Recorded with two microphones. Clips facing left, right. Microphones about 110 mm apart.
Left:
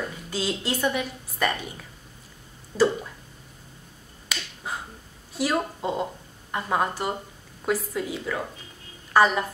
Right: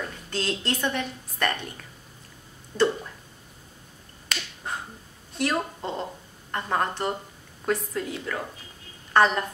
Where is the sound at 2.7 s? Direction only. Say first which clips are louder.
Left 1 dB; 5° left (ahead or behind).